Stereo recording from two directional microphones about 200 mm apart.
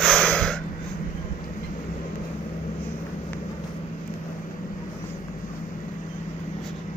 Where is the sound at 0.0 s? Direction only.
5° left (ahead or behind).